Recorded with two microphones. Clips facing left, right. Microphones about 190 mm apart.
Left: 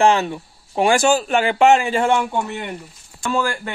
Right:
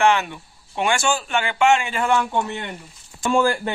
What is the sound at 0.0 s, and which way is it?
Speech, 35° left (ahead or behind).